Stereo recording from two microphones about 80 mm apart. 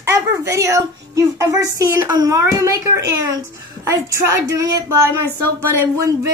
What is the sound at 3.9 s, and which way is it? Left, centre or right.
Speech, right.